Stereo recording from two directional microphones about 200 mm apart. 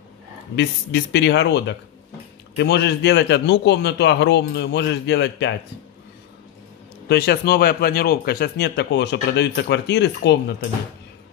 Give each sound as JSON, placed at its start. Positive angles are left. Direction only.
{"t": 0.6, "sound": "speech", "side_deg": 60}
{"t": 7.1, "sound": "speech", "side_deg": 55}